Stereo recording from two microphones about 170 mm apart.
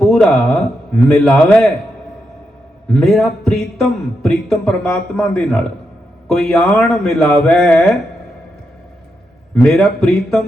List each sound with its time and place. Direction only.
0.1 s a man's voice: centre (ahead or behind)
2.9 s a man's voice: 5° left (ahead or behind)
9.6 s a man's voice: centre (ahead or behind)